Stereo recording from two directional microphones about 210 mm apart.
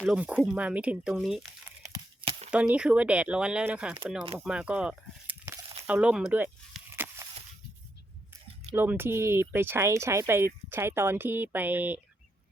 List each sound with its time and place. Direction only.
0.0 s speech: 5° right (ahead or behind)
1.9 s tearing: 25° right (ahead or behind)
2.5 s speech: 5° right (ahead or behind)
4.4 s a sound: 5° right (ahead or behind)
8.7 s speech: 10° right (ahead or behind)